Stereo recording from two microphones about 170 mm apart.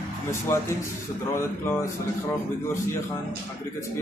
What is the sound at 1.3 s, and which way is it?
Speech, 15° left (ahead or behind).